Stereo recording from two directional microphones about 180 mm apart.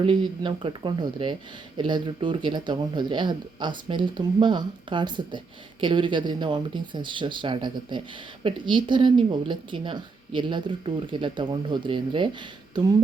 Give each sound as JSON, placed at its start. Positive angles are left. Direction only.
{"t": 0.0, "sound": "speech", "side_deg": -25}